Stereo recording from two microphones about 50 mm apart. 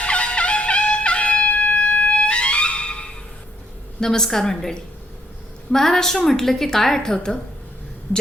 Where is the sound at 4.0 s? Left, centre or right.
Centre.